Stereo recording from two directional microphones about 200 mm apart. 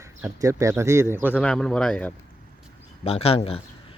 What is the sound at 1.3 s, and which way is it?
Speech, 5° left (ahead or behind).